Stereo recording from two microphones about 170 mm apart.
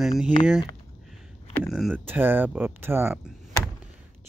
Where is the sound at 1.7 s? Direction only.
5° right (ahead or behind).